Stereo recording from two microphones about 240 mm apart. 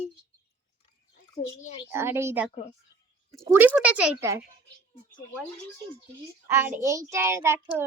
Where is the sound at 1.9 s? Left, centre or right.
Centre.